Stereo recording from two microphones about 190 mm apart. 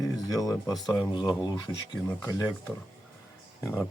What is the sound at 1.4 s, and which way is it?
Speech, 20° left (ahead or behind).